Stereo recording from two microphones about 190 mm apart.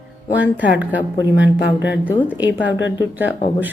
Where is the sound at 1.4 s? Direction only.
65° left (ahead or behind).